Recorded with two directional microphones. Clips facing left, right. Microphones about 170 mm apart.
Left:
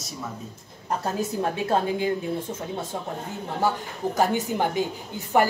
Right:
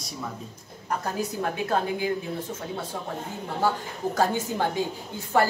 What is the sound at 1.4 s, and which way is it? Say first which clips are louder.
Speech: left 2 dB; 25° left (ahead or behind).